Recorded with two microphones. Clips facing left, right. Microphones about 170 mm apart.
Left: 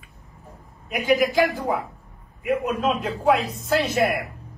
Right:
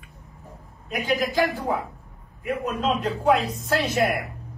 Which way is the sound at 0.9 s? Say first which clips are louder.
Left 5 dB; 15° left (ahead or behind).